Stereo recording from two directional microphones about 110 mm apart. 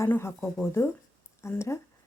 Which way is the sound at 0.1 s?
25° left (ahead or behind).